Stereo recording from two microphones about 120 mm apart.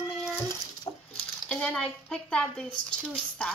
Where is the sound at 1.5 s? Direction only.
10° left (ahead or behind).